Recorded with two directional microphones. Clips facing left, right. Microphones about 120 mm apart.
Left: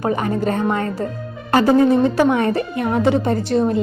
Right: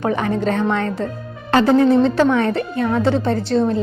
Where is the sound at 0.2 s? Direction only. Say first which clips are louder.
Right 1 dB; 5° left (ahead or behind).